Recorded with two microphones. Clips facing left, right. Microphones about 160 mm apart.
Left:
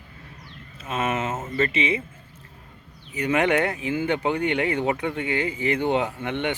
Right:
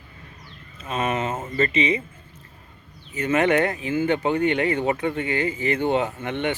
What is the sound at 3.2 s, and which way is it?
Speech, 15° left (ahead or behind).